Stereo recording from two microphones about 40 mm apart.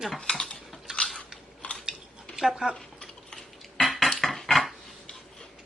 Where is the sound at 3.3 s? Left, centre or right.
Centre.